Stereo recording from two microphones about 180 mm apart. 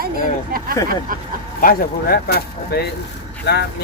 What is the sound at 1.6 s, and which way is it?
Speech, 55° left (ahead or behind).